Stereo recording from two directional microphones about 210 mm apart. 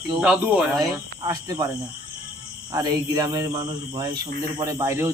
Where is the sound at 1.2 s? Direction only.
20° right (ahead or behind).